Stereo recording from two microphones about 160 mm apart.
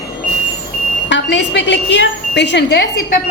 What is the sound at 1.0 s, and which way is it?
A woman's voice, 90° left.